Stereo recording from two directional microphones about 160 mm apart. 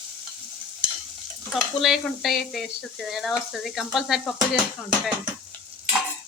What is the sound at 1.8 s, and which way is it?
Frying, centre (ahead or behind).